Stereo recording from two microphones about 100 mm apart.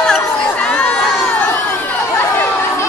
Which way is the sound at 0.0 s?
10° left (ahead or behind).